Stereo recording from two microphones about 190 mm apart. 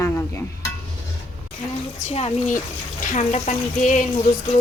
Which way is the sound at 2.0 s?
35° left (ahead or behind).